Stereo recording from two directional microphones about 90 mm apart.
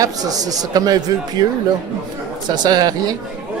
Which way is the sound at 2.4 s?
50° right (ahead or behind).